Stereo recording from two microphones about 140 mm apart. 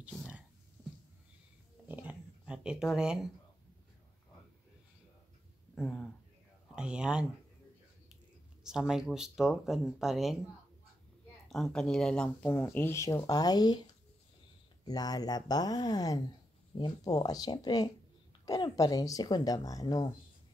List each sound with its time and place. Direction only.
1.9 s a sound: 10° right (ahead or behind)
5.8 s speech: centre (ahead or behind)
8.6 s speech: 5° right (ahead or behind)
11.4 s a woman's voice: centre (ahead or behind); by 13.8 s 30° left (ahead or behind)
14.9 s a woman's voice: 30° left (ahead or behind)